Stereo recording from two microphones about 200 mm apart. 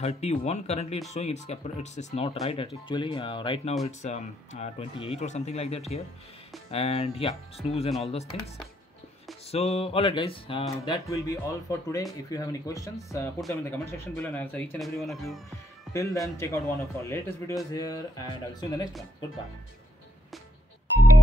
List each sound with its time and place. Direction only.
0.0 s speech: 30° left (ahead or behind)
9.5 s speech: 30° left (ahead or behind)
10.8 s speech: 15° left (ahead or behind); by 15.4 s centre (ahead or behind)
15.9 s a man's voice: 15° left (ahead or behind)